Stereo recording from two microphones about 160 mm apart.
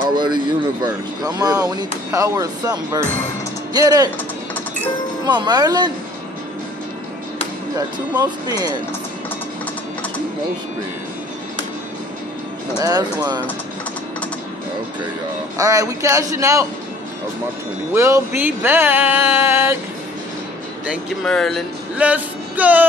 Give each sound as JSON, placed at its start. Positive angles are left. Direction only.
{"t": 0.1, "sound": "speech", "side_deg": -30}
{"t": 5.2, "sound": "speech", "side_deg": -25}
{"t": 8.2, "sound": "speech", "side_deg": -25}
{"t": 12.7, "sound": "speech", "side_deg": -25}
{"t": 15.5, "sound": "speech", "side_deg": -20}
{"t": 17.9, "sound": "a sound", "side_deg": -20}
{"t": 20.8, "sound": "speech", "side_deg": -5}
{"t": 21.9, "sound": "music", "side_deg": -10}